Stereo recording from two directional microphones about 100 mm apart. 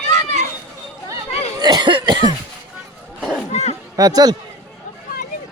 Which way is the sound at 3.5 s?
90° left.